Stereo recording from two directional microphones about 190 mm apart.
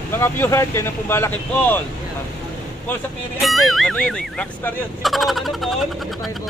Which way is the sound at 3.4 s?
Centre (ahead or behind).